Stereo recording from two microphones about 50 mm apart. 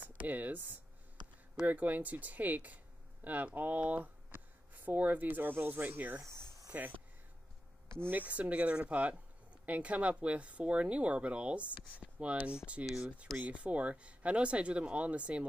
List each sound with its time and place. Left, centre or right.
0.2 s speech: right
8.1 s speech: right
12.8 s speech: centre
13.5 s speech: right